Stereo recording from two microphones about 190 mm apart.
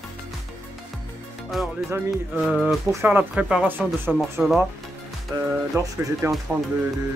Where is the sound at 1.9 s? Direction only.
5° right (ahead or behind).